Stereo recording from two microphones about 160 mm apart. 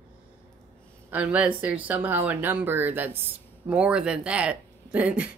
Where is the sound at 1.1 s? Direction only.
10° right (ahead or behind).